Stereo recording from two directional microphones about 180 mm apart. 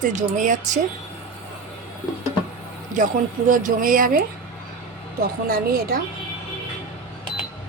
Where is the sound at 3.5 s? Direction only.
50° right (ahead or behind).